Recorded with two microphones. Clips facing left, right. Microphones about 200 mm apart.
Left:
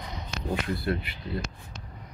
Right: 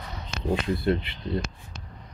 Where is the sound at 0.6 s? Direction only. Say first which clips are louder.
Right 4 dB; 25° right (ahead or behind).